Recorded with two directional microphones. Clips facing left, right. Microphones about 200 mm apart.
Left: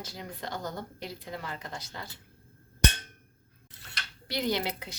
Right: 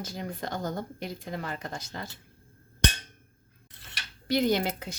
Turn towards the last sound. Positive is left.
turn(degrees=-45)  # may be behind; listen again after turning